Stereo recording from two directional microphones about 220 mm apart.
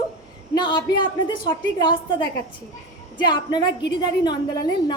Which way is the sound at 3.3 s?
20° left (ahead or behind).